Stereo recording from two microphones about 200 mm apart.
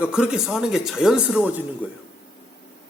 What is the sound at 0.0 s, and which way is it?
A man's voice, 5° right (ahead or behind).